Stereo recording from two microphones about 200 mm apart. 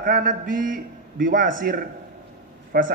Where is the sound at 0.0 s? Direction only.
45° right (ahead or behind).